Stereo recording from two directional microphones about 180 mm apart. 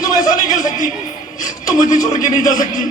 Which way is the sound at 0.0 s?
20° left (ahead or behind).